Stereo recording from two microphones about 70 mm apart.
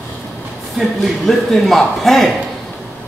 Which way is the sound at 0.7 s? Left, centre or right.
Centre.